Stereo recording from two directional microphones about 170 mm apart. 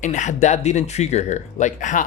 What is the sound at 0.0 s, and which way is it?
Speech, 45° left (ahead or behind).